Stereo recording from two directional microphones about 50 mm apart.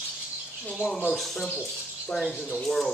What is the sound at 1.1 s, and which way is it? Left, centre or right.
Speech, centre.